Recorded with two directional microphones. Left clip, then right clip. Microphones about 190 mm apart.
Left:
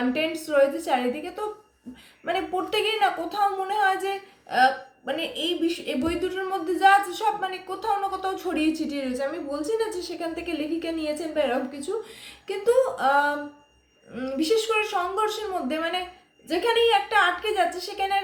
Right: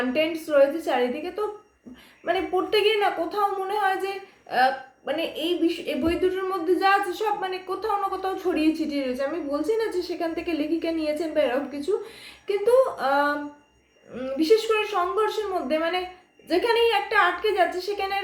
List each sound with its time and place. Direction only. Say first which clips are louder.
0.1 s speech: right 2 dB; 10° left (ahead or behind)